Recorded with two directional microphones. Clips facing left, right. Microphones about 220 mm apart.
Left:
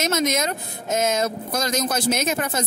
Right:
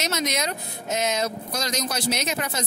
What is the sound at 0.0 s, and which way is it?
Speech, 50° left (ahead or behind).